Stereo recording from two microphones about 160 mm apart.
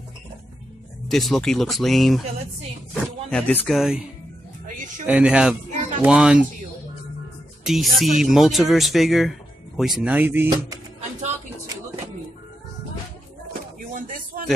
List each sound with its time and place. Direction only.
1.0 s speech: centre (ahead or behind)
5.0 s speech: 10° right (ahead or behind)
7.6 s speech: centre (ahead or behind)
13.5 s a sound: 60° right (ahead or behind)